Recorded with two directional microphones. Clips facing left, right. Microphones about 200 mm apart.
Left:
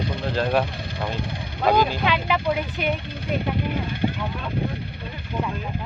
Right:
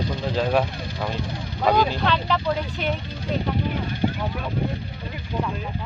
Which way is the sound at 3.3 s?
55° left (ahead or behind).